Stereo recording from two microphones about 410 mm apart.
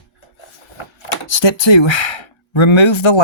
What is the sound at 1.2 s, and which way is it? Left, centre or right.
Speech, left.